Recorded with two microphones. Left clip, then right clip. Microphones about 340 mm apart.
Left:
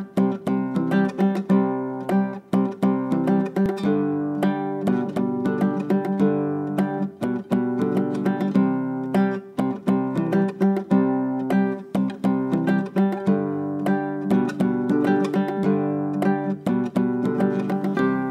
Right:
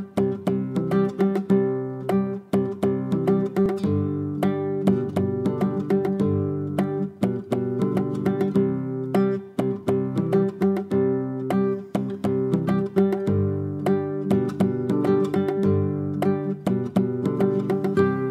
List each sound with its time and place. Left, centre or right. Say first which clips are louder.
0.5 s music: left 1 dB; left
5.4 s music: left 1 dB; left
7.5 s music: left 3 dB; left
12.4 s music: left 1 dB; left